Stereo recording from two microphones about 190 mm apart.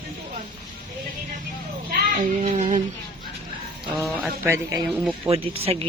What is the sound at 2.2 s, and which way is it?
Speech, 35° right (ahead or behind).